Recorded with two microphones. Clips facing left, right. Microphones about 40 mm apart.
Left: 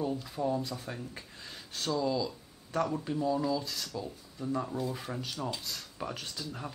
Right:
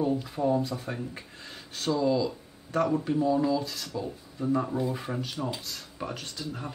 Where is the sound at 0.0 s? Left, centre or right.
Centre.